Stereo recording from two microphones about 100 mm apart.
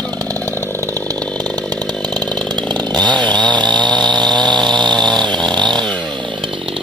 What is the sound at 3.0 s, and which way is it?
Chainsaw, 50° right (ahead or behind).